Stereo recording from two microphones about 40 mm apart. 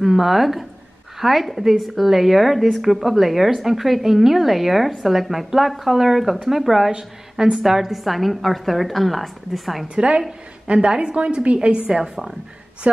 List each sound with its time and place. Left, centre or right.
0.0 s a woman's voice: centre
6.9 s a woman's voice: centre
10.7 s a woman's voice: right
11.9 s a woman's voice: centre
12.9 s a woman's voice: right